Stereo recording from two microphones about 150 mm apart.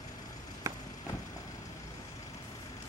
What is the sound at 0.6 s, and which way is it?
Vehicle, 20° right (ahead or behind).